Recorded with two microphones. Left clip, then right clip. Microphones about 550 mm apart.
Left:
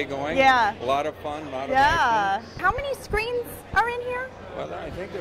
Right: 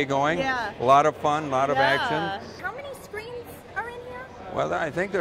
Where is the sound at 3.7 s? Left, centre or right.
Left.